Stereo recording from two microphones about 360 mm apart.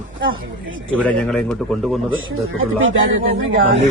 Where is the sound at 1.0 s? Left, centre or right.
Centre.